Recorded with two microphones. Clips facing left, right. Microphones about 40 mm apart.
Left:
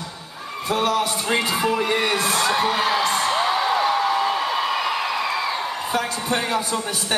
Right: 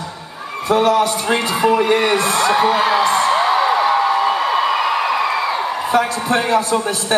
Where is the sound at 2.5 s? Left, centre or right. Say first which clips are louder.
Right 6 dB; centre.